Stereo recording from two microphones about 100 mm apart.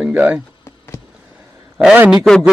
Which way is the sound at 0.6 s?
30° left (ahead or behind).